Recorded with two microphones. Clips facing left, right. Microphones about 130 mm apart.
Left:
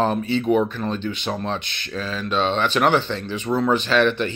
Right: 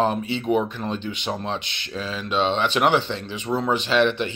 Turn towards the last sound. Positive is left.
turn(degrees=-20)  # may be behind; listen again after turning